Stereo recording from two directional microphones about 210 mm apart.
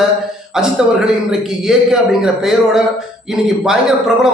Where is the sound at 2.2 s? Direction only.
Centre (ahead or behind).